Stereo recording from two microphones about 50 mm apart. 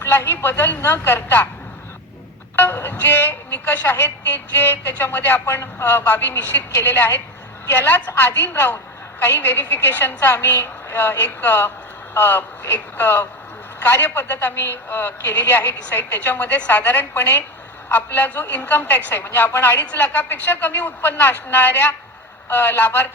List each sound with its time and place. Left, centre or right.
0.3 s a woman's voice: left
2.6 s a woman's voice: left
19.8 s a woman's voice: left